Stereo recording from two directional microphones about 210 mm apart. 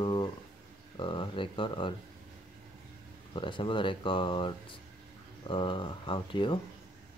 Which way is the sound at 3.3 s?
25° left (ahead or behind).